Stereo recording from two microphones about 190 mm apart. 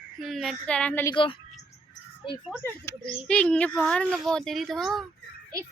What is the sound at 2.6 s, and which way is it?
Speech, 15° left (ahead or behind).